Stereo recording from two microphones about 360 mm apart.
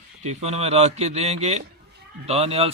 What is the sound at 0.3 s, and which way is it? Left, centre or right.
Speech, centre.